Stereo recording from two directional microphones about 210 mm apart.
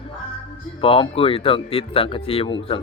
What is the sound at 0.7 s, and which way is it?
Speech, 25° left (ahead or behind).